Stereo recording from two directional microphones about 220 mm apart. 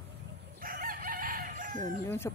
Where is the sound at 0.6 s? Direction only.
40° right (ahead or behind).